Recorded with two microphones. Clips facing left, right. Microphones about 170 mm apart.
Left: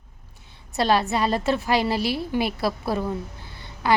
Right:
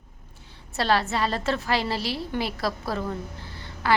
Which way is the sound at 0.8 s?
15° left (ahead or behind).